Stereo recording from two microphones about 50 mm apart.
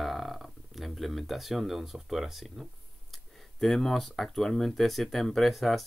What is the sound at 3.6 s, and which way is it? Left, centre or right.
Speech, centre.